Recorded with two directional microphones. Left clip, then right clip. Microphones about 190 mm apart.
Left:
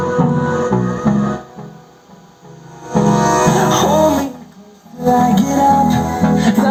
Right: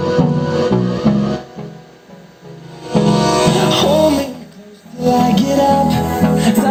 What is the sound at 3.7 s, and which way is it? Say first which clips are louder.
Music: even; 40° right (ahead or behind).